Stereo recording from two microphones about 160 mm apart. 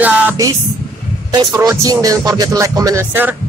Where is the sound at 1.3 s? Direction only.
25° right (ahead or behind).